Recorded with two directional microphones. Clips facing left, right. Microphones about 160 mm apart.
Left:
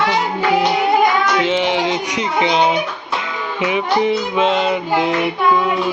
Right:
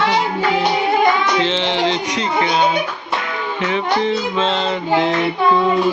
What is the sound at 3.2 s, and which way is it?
Music, 15° left (ahead or behind).